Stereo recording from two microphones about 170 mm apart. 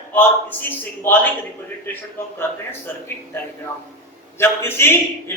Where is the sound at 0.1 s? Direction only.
10° left (ahead or behind).